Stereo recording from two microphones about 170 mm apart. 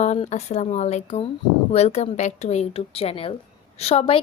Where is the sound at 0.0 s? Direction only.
45° left (ahead or behind).